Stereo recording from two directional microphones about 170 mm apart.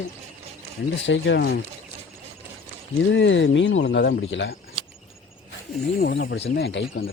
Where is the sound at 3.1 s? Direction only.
90° left.